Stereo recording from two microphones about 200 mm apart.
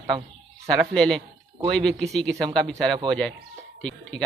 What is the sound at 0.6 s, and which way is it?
Speech, 5° left (ahead or behind).